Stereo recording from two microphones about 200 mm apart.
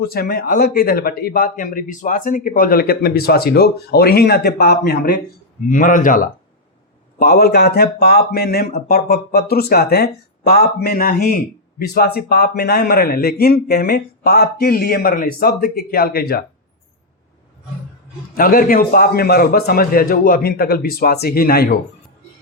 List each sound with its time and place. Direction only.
0.0 s speech: 50° left (ahead or behind)
18.3 s speech: 45° left (ahead or behind)